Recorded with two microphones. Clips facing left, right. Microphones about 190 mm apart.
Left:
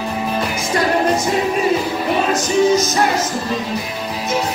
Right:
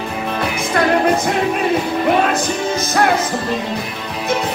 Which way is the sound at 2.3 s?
55° right (ahead or behind).